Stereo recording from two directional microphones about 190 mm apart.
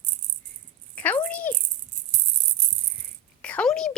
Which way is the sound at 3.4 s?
5° left (ahead or behind).